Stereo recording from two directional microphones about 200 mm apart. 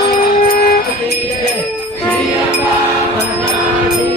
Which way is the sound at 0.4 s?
45° left (ahead or behind).